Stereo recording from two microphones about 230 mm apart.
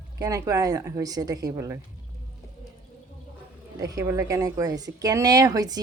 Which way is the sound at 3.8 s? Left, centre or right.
Centre.